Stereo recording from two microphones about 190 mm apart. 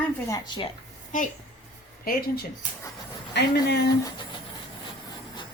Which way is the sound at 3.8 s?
25° left (ahead or behind).